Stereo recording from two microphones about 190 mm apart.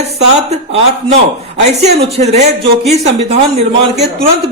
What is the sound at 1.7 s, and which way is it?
Speech, 35° right (ahead or behind).